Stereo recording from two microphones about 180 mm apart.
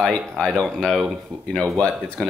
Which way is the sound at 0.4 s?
Centre (ahead or behind).